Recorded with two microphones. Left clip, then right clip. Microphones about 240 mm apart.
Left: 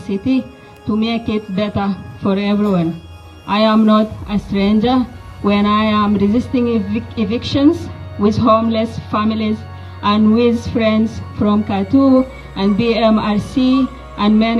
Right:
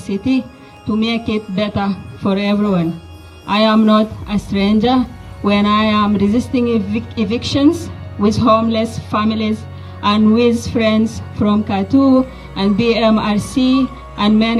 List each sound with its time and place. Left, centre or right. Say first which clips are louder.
0.0 s speech: even; centre
11.9 s music: even; right
12.5 s speech: right 1 dB; centre